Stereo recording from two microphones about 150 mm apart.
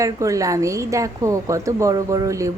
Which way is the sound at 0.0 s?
20° right (ahead or behind).